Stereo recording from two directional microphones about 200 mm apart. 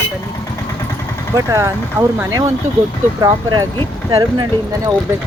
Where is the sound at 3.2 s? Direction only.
15° right (ahead or behind).